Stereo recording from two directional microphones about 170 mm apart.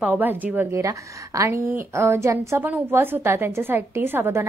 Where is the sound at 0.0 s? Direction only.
10° right (ahead or behind).